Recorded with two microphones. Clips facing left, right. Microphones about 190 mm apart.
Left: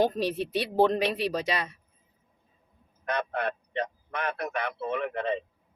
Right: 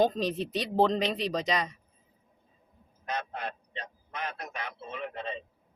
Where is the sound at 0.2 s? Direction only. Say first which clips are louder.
Left 2 dB; 10° left (ahead or behind).